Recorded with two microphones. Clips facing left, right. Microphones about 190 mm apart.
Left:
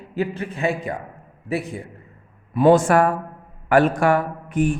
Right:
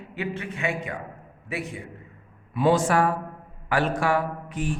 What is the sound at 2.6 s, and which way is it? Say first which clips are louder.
Speech: left 6 dB; 50° left (ahead or behind).